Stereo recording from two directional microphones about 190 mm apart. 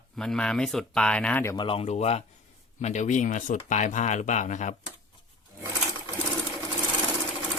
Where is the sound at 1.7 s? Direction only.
35° left (ahead or behind).